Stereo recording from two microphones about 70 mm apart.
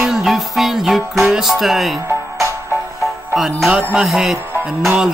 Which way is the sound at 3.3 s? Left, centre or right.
Centre.